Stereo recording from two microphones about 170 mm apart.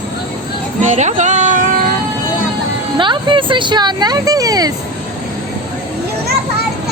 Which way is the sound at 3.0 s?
30° right (ahead or behind).